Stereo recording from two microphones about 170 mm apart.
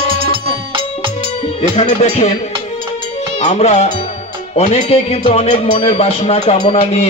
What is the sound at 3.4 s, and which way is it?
Speech, 40° left (ahead or behind).